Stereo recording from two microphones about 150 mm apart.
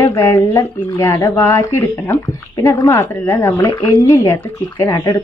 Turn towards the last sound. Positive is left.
turn(degrees=20)  # may be behind; listen again after turning